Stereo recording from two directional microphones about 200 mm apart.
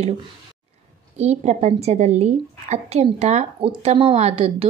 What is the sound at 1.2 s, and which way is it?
A woman's voice, 35° right (ahead or behind).